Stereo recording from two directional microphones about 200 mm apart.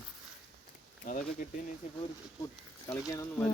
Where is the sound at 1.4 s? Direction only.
40° left (ahead or behind).